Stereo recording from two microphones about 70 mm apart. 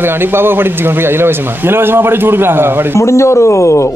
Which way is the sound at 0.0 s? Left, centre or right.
Right.